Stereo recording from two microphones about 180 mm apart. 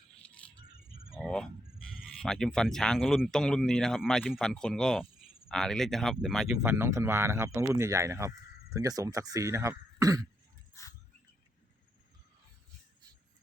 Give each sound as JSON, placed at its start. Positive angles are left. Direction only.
{"t": 1.2, "sound": "fowl", "side_deg": 5}
{"t": 1.9, "sound": "speech", "side_deg": 0}
{"t": 6.6, "sound": "speech", "side_deg": -15}